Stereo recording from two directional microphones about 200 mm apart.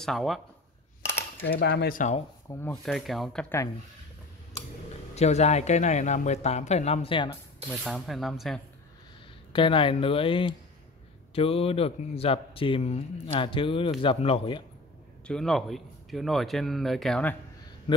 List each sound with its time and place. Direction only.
0.0 s speech: centre (ahead or behind)
1.5 s speech: 55° left (ahead or behind); by 2.2 s 40° left (ahead or behind)
2.5 s speech: 15° left (ahead or behind)
2.8 s speech: centre (ahead or behind)
5.1 s speech: 35° left (ahead or behind)
7.7 s speech: centre (ahead or behind)
9.5 s speech: 25° left (ahead or behind)
15.2 s speech: 5° left (ahead or behind)